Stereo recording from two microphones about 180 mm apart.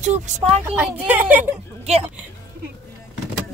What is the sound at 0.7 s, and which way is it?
Speech, 10° right (ahead or behind).